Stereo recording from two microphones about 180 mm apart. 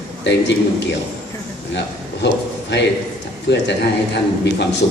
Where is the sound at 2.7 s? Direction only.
80° left.